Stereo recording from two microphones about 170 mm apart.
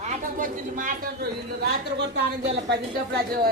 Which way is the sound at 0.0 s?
45° right (ahead or behind).